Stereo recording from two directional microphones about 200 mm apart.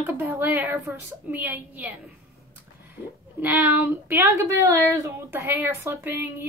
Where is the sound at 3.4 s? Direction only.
10° right (ahead or behind).